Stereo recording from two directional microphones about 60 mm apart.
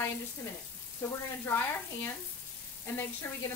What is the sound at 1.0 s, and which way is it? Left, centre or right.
Frying, left.